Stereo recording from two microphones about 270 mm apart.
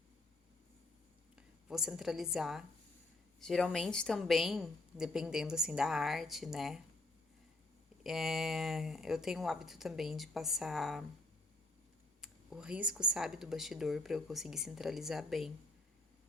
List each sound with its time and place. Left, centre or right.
1.4 s a woman's voice: centre
8.0 s a woman's voice: centre
12.2 s a woman's voice: centre